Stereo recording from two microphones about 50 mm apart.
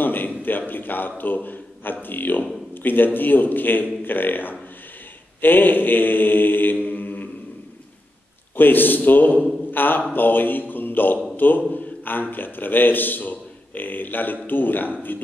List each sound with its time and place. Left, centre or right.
0.0 s a sound: left
0.3 s a man's voice: left
8.5 s a man's voice: left